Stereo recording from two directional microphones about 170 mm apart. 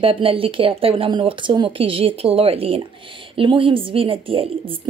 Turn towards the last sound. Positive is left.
turn(degrees=-30)  # may be behind; listen again after turning